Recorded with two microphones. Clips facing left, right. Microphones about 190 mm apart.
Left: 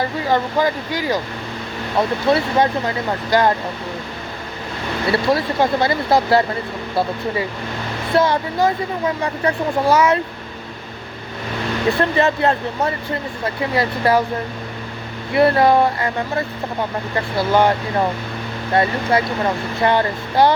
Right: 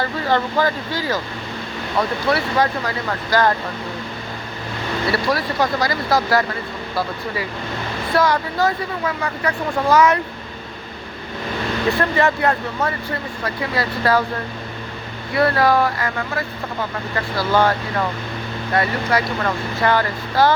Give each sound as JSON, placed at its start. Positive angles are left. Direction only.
{"t": 0.0, "sound": "speech", "side_deg": 15}
{"t": 5.1, "sound": "speech", "side_deg": 25}
{"t": 8.1, "sound": "speech", "side_deg": 25}
{"t": 11.9, "sound": "speech", "side_deg": 20}
{"t": 15.3, "sound": "speech", "side_deg": 25}